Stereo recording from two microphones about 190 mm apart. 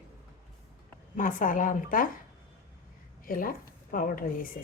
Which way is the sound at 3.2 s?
50° left (ahead or behind).